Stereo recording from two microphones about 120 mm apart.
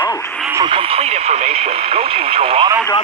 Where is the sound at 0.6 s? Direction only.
45° right (ahead or behind).